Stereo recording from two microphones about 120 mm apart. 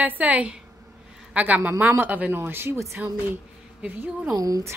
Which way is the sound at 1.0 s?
10° right (ahead or behind).